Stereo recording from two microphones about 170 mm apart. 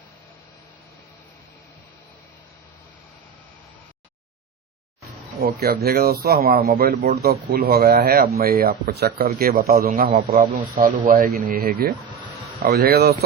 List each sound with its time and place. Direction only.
5.4 s a man's voice: 65° right (ahead or behind)